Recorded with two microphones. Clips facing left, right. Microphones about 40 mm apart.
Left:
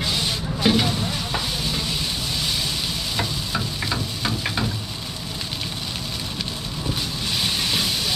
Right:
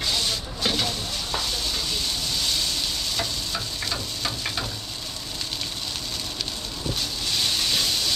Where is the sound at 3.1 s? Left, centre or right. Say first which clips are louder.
Left 3 dB; centre.